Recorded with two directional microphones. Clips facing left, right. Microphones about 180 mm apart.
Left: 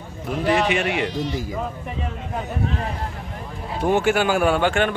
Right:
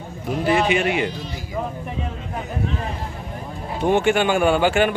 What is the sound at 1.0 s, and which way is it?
Speech, 80° left.